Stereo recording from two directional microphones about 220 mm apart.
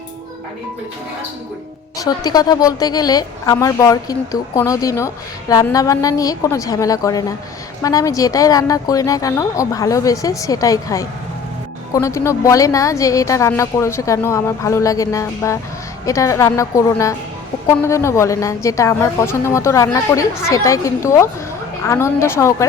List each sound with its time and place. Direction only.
2.0 s a woman's voice: 20° left (ahead or behind)